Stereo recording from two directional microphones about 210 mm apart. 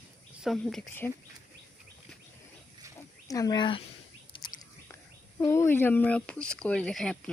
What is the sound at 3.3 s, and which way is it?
Speech, 15° left (ahead or behind).